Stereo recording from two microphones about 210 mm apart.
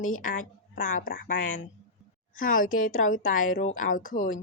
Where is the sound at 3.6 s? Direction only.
35° left (ahead or behind).